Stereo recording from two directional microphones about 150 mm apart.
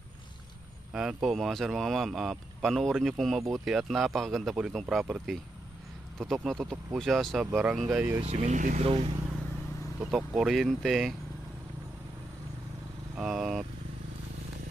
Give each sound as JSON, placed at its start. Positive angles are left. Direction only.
{"t": 0.9, "sound": "speech", "side_deg": 0}
{"t": 8.2, "sound": "speech", "side_deg": -45}
{"t": 8.8, "sound": "speech", "side_deg": -40}
{"t": 9.9, "sound": "speech", "side_deg": 0}
{"t": 13.1, "sound": "speech", "side_deg": -5}